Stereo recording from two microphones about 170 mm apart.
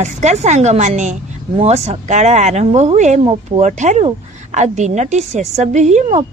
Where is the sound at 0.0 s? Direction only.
40° right (ahead or behind).